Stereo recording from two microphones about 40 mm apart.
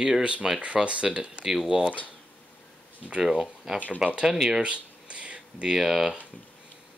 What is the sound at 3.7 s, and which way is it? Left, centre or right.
Speech, centre.